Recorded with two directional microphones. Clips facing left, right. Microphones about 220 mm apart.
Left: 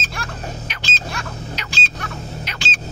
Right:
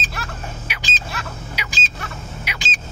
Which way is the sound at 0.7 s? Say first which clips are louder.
Left 2 dB; 5° right (ahead or behind).